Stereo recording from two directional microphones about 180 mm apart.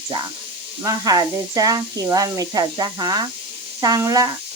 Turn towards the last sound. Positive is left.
turn(degrees=-20)  # may be behind; listen again after turning